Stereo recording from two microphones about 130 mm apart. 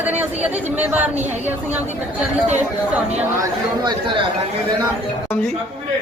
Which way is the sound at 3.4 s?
35° right (ahead or behind).